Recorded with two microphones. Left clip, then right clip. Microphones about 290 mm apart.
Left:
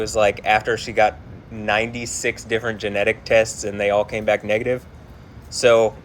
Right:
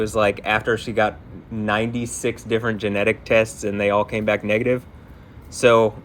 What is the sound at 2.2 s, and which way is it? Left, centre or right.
Speech, right.